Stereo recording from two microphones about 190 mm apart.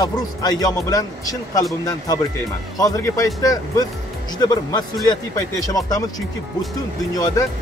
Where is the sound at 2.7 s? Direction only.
20° left (ahead or behind).